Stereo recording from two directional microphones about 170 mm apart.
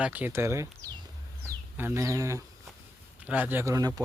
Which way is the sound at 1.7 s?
15° right (ahead or behind).